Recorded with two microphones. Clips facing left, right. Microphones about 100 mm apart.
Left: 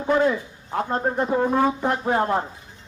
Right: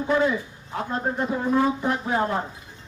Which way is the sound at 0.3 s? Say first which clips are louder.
Left 3 dB; 45° left (ahead or behind).